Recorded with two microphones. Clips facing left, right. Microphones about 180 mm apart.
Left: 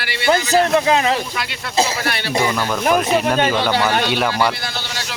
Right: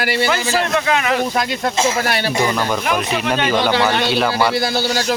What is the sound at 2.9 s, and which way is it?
Speech, 40° left (ahead or behind).